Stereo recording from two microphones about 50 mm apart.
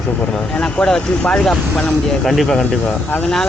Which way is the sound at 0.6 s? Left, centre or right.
Centre.